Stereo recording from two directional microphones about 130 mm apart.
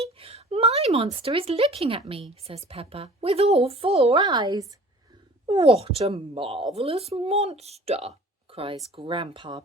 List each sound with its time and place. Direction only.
0.0 s a woman's voice: 50° right (ahead or behind)
4.2 s speech: 35° right (ahead or behind)
5.5 s speech: 45° right (ahead or behind)